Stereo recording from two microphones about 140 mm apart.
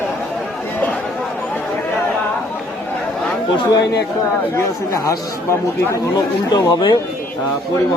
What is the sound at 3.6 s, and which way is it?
A man's voice, 30° left (ahead or behind).